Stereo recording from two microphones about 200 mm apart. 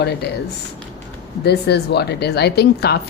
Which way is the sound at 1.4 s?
55° left (ahead or behind).